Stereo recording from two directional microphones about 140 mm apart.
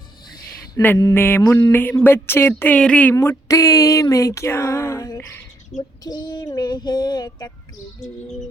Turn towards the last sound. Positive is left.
turn(degrees=30)  # may be behind; listen again after turning